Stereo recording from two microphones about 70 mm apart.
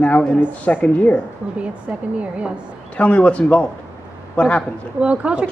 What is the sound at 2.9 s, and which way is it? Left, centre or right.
A man's voice, centre.